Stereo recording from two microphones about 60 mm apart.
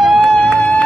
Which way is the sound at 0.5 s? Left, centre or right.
Centre.